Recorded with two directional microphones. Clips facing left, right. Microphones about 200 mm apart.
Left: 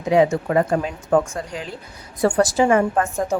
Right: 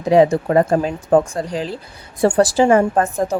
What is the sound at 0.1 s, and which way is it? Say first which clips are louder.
A woman's voice: right 4 dB; 35° right (ahead or behind).